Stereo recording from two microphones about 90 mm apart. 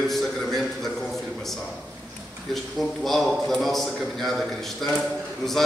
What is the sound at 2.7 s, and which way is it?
A man's voice, centre (ahead or behind).